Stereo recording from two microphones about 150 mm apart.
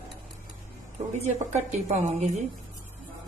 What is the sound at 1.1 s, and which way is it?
A woman's voice, 50° right (ahead or behind).